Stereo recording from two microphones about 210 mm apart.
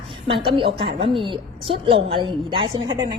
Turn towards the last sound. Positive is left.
turn(degrees=-20)  # may be behind; listen again after turning